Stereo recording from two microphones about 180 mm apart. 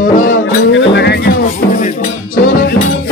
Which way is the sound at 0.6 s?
75° left (ahead or behind).